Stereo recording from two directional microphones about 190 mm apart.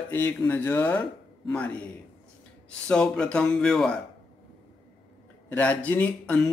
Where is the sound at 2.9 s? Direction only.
5° left (ahead or behind).